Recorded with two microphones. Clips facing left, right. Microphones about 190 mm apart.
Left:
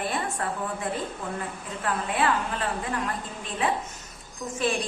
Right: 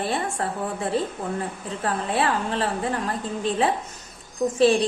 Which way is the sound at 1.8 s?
30° right (ahead or behind).